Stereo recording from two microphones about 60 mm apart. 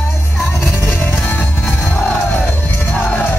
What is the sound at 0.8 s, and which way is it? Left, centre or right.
Music, left.